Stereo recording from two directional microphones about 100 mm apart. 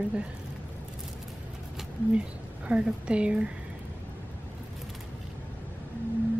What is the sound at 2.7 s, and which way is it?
Speech, 10° right (ahead or behind).